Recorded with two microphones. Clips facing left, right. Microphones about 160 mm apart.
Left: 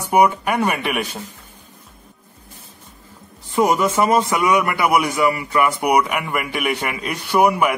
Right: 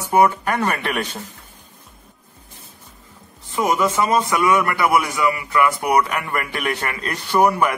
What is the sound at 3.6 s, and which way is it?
A man's voice, 30° left (ahead or behind).